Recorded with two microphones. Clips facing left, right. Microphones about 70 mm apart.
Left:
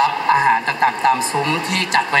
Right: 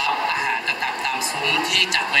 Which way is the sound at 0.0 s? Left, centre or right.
Left.